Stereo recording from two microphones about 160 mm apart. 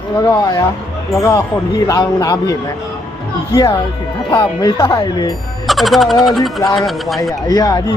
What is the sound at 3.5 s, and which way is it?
Speech, 25° left (ahead or behind).